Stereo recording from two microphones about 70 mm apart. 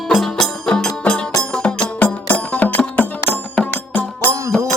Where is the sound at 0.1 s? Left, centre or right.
Centre; by 3.3 s left.